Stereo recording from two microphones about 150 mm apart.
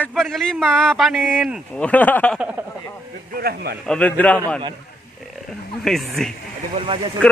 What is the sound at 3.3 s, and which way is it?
Speech, 90° right.